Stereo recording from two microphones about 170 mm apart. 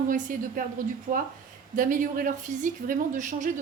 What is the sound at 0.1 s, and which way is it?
A woman's voice, 55° right (ahead or behind).